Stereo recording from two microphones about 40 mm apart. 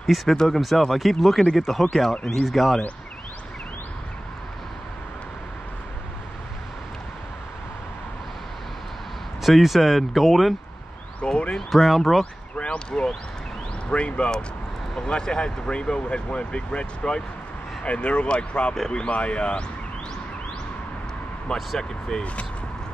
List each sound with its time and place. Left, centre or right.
0.0 s speech: centre
9.4 s speech: centre
11.2 s speech: left
11.5 s speech: centre
12.5 s speech: left
21.5 s speech: centre
22.2 s speech: left